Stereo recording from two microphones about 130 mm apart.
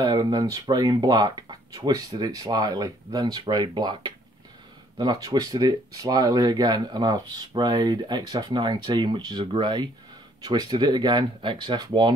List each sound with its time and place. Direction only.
0.0 s speech: 30° right (ahead or behind)